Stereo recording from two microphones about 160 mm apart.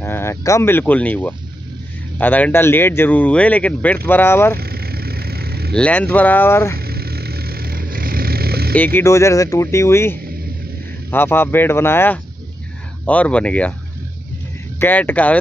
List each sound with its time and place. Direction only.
0.0 s speech: 15° left (ahead or behind)
4.6 s vehicle: 70° right (ahead or behind)
5.7 s speech: 10° left (ahead or behind)
6.8 s vehicle: 75° right (ahead or behind)
8.7 s speech: 10° left (ahead or behind)
14.8 s speech: 10° left (ahead or behind)